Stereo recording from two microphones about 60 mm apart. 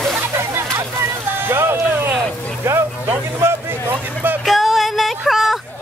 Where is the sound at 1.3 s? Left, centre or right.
Right.